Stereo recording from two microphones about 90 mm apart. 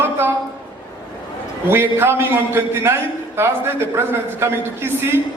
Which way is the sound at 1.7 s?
25° right (ahead or behind).